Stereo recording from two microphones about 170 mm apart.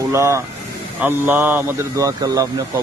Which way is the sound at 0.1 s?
15° right (ahead or behind).